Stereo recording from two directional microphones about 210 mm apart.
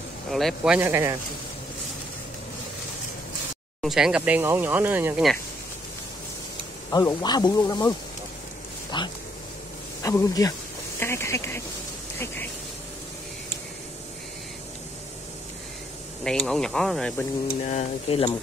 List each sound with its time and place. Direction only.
0.3 s speech: centre (ahead or behind)
3.8 s speech: 5° right (ahead or behind)
6.9 s speech: 20° left (ahead or behind)
8.9 s speech: 20° left (ahead or behind)
16.3 s speech: 5° left (ahead or behind)
17.6 s speech: 30° left (ahead or behind)